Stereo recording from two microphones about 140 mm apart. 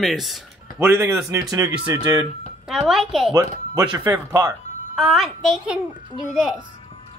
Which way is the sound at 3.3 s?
25° right (ahead or behind).